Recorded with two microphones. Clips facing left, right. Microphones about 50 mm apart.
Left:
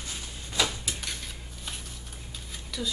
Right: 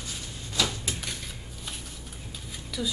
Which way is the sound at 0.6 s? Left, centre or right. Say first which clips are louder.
Even; centre.